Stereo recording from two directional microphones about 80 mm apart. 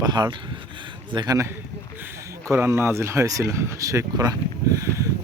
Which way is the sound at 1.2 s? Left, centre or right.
Right.